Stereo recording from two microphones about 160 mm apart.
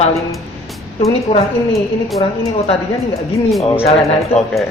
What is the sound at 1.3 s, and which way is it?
Speech, 40° left (ahead or behind).